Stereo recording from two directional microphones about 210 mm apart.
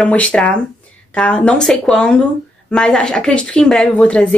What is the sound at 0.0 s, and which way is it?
A woman's voice, 5° left (ahead or behind).